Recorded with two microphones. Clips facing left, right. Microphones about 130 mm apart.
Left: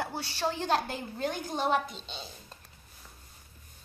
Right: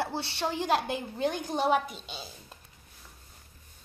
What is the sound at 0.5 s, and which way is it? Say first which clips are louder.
A woman's voice: right 4 dB; 10° right (ahead or behind).